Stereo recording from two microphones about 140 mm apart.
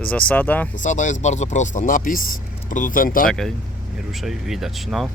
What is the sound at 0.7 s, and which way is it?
Speech, 60° left (ahead or behind).